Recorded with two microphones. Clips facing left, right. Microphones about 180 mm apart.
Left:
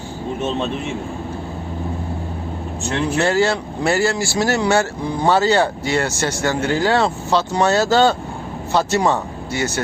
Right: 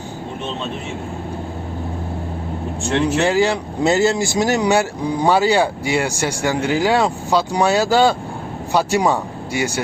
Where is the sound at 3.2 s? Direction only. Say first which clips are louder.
Right 1 dB; 15° right (ahead or behind).